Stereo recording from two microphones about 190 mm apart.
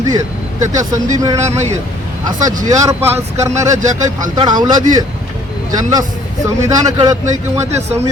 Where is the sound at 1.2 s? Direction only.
15° right (ahead or behind).